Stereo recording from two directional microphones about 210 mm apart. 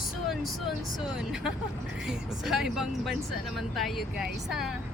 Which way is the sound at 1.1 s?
5° right (ahead or behind).